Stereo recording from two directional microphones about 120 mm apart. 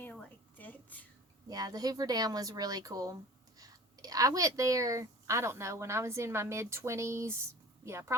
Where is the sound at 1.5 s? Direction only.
30° right (ahead or behind).